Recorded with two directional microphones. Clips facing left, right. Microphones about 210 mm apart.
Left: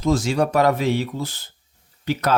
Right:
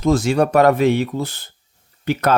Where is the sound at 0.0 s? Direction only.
55° right (ahead or behind).